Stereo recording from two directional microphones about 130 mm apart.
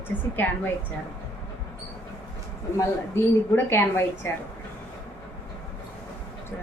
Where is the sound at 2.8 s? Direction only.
20° left (ahead or behind).